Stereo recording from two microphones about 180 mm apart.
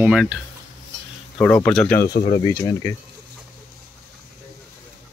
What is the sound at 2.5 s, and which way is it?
Speech, 15° left (ahead or behind).